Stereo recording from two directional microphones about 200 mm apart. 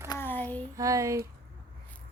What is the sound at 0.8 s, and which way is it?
Speech, 15° right (ahead or behind).